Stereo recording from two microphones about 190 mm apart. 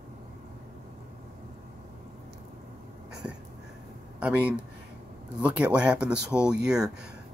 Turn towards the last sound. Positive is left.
turn(degrees=-5)  # may be behind; listen again after turning